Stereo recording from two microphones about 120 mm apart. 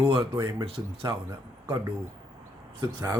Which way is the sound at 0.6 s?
50° right (ahead or behind).